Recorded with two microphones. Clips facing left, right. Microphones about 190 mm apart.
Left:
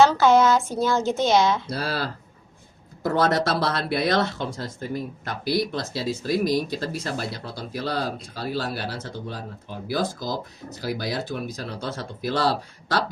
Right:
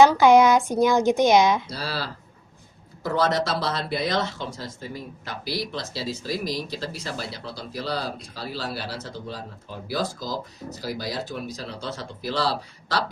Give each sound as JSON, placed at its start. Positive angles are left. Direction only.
{"t": 0.0, "sound": "speech", "side_deg": -15}
{"t": 1.7, "sound": "speech", "side_deg": 55}
{"t": 9.8, "sound": "speech", "side_deg": 55}